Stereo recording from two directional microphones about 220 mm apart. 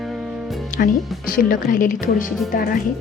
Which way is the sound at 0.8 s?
40° left (ahead or behind).